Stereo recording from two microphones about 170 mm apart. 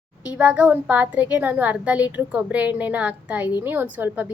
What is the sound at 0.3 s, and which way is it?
A woman's voice, 5° right (ahead or behind).